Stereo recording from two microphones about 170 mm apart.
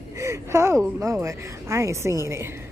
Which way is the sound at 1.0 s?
15° right (ahead or behind).